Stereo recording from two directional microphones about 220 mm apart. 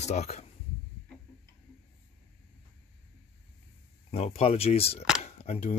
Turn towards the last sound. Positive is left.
turn(degrees=30)  # may be behind; listen again after turning